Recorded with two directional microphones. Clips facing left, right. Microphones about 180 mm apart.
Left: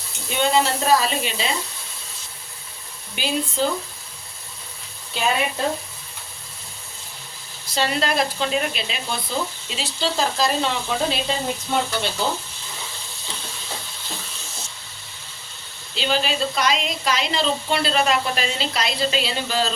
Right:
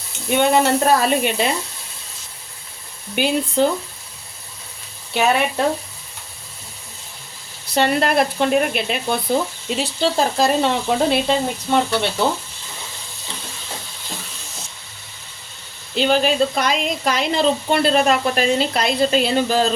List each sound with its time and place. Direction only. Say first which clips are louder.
0.3 s sizzle: right 5 dB; 60° right (ahead or behind)
3.2 s sizzle: right 6 dB; 60° right (ahead or behind)
5.1 s speech: right 5 dB; 65° right (ahead or behind)
7.7 s sizzle: right 5 dB; 55° right (ahead or behind)
16.0 s a woman's voice: right 6 dB; 55° right (ahead or behind)